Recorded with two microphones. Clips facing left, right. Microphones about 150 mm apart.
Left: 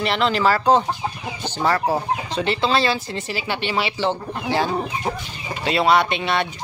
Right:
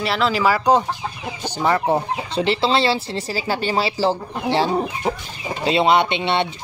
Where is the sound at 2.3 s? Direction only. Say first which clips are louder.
Right 3 dB; 30° right (ahead or behind).